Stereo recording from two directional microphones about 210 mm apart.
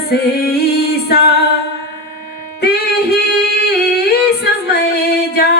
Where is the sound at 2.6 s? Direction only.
50° left (ahead or behind).